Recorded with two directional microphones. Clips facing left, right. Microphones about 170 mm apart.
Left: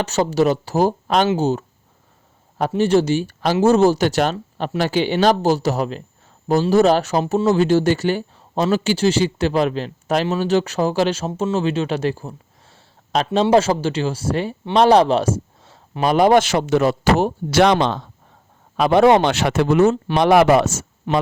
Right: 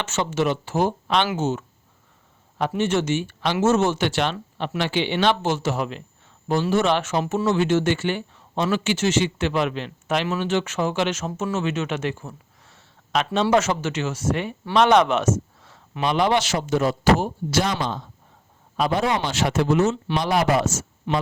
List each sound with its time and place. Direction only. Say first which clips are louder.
0.0 s speech: left 6 dB; 35° left (ahead or behind); by 18.0 s 75° left (ahead or behind)
18.8 s speech: left 9 dB; 65° left (ahead or behind)